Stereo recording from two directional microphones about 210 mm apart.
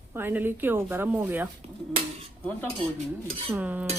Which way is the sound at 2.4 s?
5° left (ahead or behind).